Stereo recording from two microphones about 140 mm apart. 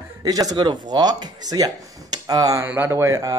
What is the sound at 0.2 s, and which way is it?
Speech, 25° right (ahead or behind).